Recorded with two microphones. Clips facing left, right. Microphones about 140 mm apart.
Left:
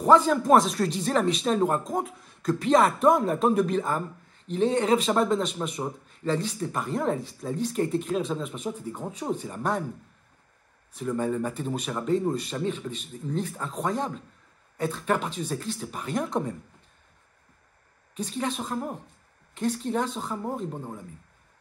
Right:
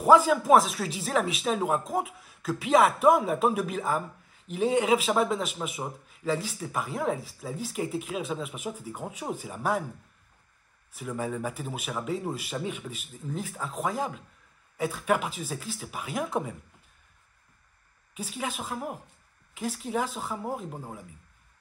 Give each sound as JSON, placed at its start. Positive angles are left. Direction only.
{"t": 0.0, "sound": "speech", "side_deg": -5}
{"t": 10.9, "sound": "speech", "side_deg": -5}
{"t": 18.1, "sound": "speech", "side_deg": -5}